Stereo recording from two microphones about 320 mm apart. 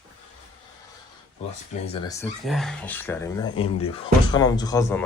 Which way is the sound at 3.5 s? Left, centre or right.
Left.